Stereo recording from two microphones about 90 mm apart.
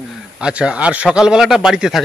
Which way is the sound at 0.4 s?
10° right (ahead or behind).